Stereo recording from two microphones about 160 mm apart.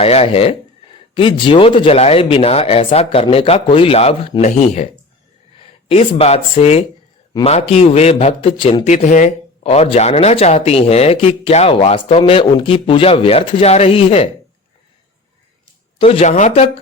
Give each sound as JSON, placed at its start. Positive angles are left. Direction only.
{"t": 0.0, "sound": "speech", "side_deg": 40}
{"t": 5.9, "sound": "speech", "side_deg": 40}
{"t": 8.9, "sound": "speech", "side_deg": 50}
{"t": 9.6, "sound": "speech", "side_deg": 40}
{"t": 16.0, "sound": "speech", "side_deg": 40}